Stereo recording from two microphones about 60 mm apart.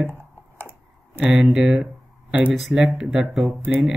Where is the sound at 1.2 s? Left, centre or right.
Centre.